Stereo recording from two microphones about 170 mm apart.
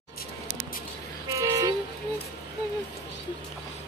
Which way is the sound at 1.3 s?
20° right (ahead or behind).